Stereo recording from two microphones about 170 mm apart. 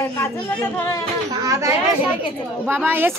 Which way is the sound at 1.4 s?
20° right (ahead or behind).